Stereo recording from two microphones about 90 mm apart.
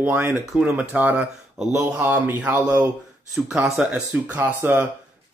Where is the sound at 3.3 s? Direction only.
10° right (ahead or behind).